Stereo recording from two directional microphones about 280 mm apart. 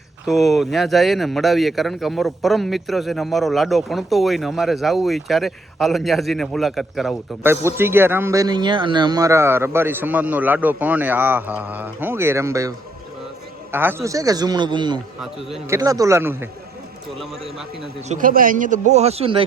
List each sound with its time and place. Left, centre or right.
0.3 s a man's voice: centre
15.2 s speech: centre
15.8 s a man's voice: centre
18.1 s a man's voice: right